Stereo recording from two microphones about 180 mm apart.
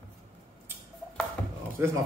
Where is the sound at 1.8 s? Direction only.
15° right (ahead or behind).